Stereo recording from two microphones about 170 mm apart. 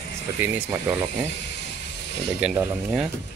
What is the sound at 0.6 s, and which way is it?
Speech, 10° right (ahead or behind).